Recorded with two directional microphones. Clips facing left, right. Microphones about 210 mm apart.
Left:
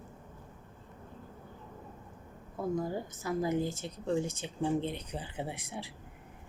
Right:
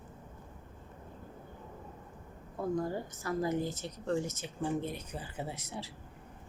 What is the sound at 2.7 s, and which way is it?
Speech, 10° left (ahead or behind).